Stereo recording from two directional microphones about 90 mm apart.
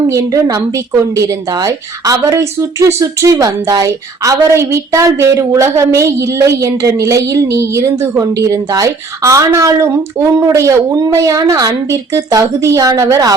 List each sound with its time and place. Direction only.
0.1 s a woman's voice: 40° right (ahead or behind)